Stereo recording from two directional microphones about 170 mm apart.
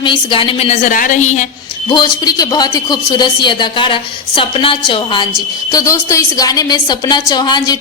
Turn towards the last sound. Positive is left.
turn(degrees=25)  # may be behind; listen again after turning